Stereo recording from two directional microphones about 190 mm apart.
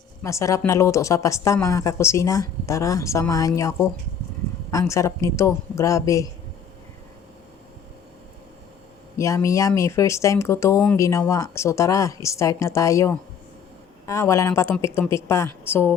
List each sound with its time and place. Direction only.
0.2 s speech: 15° left (ahead or behind)
9.1 s speech: 15° left (ahead or behind)